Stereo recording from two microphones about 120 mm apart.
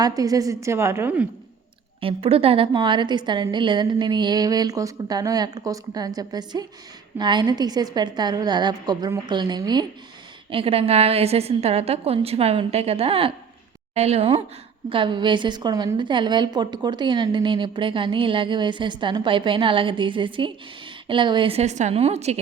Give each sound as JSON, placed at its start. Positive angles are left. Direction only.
{"t": 0.0, "sound": "a woman's voice", "side_deg": -30}
{"t": 2.0, "sound": "a woman's voice", "side_deg": -50}
{"t": 10.5, "sound": "a woman's voice", "side_deg": -50}
{"t": 13.9, "sound": "a woman's voice", "side_deg": -65}
{"t": 14.8, "sound": "a woman's voice", "side_deg": -45}
{"t": 21.6, "sound": "a woman's voice", "side_deg": -75}